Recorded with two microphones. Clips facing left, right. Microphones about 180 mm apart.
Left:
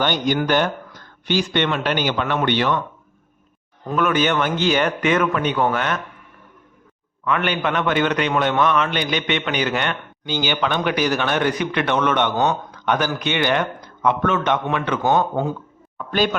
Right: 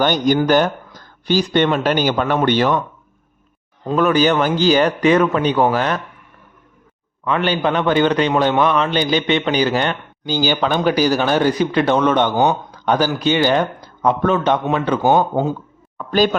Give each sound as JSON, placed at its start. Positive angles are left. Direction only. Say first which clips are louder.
{"t": 0.0, "sound": "a man's voice", "louder": "right 5 dB", "side_deg": -40}
{"t": 3.8, "sound": "a man's voice", "louder": "right 4 dB", "side_deg": -35}
{"t": 7.3, "sound": "a man's voice", "louder": "right 3 dB", "side_deg": -30}
{"t": 16.0, "sound": "speech", "louder": "right 4 dB", "side_deg": -40}